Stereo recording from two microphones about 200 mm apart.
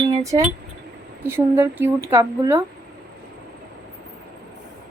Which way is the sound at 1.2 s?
15° right (ahead or behind).